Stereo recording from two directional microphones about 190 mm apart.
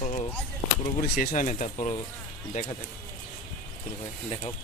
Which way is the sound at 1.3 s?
40° left (ahead or behind).